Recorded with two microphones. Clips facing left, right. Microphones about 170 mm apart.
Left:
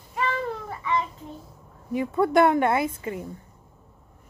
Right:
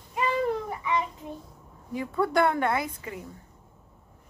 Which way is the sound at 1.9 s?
20° left (ahead or behind).